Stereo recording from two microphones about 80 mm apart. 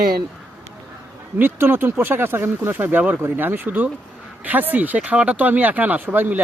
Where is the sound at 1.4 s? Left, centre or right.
Right.